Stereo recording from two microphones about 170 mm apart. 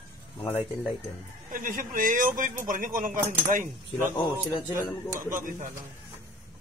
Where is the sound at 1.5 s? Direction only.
55° right (ahead or behind).